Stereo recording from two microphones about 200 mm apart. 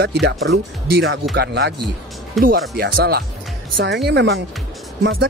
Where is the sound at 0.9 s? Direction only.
50° right (ahead or behind).